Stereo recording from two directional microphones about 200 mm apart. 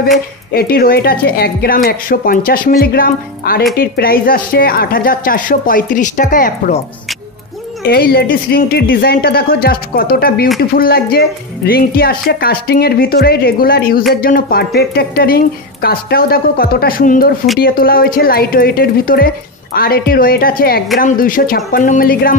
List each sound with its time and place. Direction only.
0.5 s speech: 50° left (ahead or behind)
7.8 s speech: 50° left (ahead or behind)